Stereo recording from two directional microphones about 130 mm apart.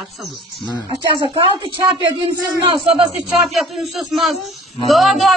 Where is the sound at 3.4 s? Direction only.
Centre (ahead or behind).